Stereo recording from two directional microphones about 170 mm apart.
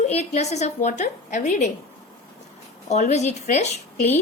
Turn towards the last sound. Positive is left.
turn(degrees=40)  # may be behind; listen again after turning